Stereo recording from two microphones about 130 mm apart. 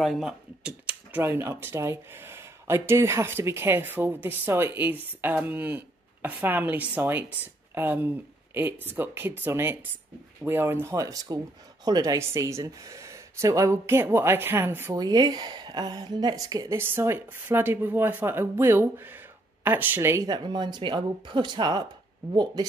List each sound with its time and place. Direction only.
0.0 s speech: centre (ahead or behind)
1.1 s a woman's voice: 15° right (ahead or behind)
15.0 s a woman's voice: 30° right (ahead or behind)